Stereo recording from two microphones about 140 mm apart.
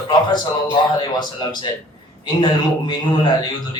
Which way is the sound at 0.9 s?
30° left (ahead or behind).